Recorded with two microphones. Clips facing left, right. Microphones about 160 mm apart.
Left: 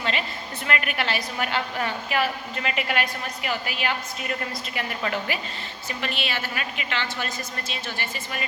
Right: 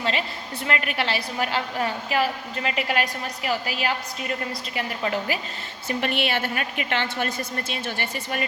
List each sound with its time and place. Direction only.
0.0 s a woman's voice: 30° right (ahead or behind)
5.9 s a woman's voice: 55° right (ahead or behind)